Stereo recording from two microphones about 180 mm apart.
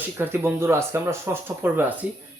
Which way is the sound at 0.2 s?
10° right (ahead or behind).